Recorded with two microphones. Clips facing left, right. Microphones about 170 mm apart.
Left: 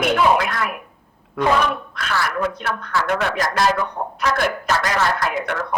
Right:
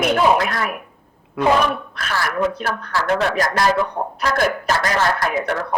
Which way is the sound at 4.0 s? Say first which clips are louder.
Right 2 dB; 35° right (ahead or behind).